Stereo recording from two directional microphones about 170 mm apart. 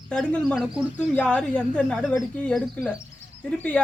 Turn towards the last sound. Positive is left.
turn(degrees=5)  # may be behind; listen again after turning